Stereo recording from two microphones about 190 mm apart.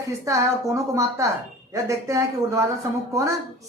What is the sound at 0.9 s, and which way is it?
Speech, 15° right (ahead or behind).